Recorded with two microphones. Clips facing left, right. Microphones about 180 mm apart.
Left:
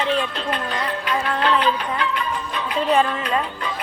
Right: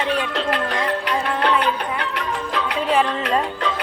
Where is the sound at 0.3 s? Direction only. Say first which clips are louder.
Right 3 dB; 80° right.